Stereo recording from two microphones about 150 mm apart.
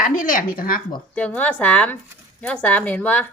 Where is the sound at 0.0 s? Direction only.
65° left (ahead or behind).